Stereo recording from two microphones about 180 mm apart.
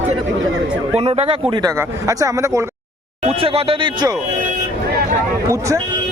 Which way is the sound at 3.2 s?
35° right (ahead or behind).